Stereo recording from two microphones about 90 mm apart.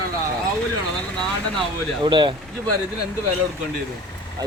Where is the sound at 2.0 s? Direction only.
60° right (ahead or behind).